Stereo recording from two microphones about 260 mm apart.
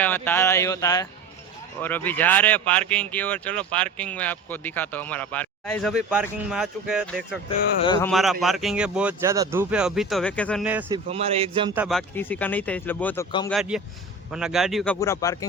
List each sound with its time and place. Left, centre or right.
0.0 s speech: centre
7.9 s speech: centre
8.1 s speech: centre
10.8 s a man's voice: right
11.7 s speech: centre
14.9 s speech: centre